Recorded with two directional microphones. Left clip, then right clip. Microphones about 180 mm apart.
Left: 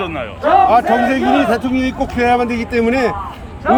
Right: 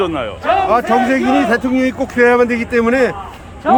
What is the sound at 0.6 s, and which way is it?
A man's voice, 20° right (ahead or behind).